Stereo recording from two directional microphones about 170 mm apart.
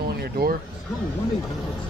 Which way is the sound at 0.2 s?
65° right (ahead or behind).